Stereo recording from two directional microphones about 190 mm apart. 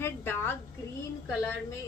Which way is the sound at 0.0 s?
10° left (ahead or behind).